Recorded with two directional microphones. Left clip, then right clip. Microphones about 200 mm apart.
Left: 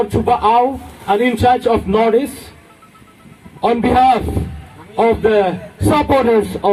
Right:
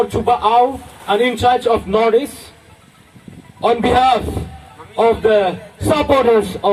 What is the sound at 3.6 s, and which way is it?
A man's voice, 50° right (ahead or behind).